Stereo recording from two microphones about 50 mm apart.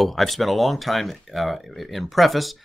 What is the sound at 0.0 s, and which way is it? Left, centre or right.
Speech, centre.